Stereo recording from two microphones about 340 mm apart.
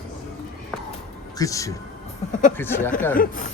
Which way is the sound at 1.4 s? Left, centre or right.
Centre.